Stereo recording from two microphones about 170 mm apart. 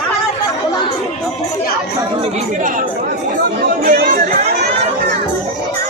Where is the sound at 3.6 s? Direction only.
70° right (ahead or behind).